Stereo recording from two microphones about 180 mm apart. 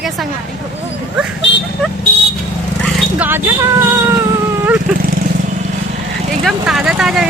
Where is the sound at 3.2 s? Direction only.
10° right (ahead or behind).